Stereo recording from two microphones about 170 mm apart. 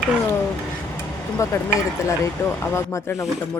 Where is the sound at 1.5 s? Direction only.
15° left (ahead or behind).